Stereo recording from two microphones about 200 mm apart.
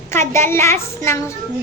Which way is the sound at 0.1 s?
10° left (ahead or behind).